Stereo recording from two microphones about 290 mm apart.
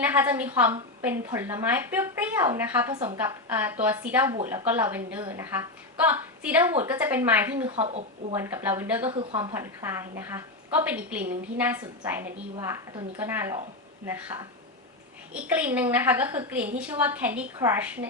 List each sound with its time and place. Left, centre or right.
0.0 s a woman's voice: centre
7.7 s speech: centre
8.4 s a woman's voice: centre